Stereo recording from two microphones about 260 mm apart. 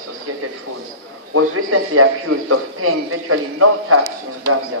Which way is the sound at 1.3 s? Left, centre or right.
Right.